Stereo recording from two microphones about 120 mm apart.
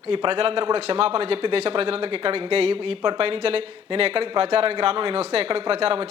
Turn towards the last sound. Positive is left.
turn(degrees=-50)  # may be behind; listen again after turning